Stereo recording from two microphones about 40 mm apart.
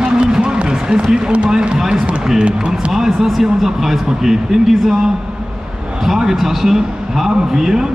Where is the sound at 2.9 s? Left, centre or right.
Centre.